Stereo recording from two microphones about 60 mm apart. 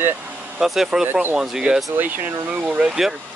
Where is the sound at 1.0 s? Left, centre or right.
Right.